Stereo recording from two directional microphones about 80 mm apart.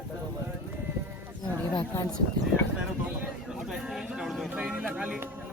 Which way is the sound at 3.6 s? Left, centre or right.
Centre.